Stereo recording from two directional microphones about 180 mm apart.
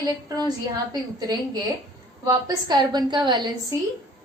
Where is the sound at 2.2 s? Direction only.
20° right (ahead or behind).